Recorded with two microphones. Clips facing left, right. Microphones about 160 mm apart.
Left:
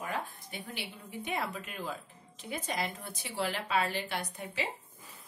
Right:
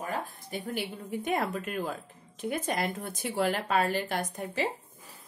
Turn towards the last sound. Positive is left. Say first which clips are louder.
# right 6 dB
turn(degrees=-45)  # may be behind; listen again after turning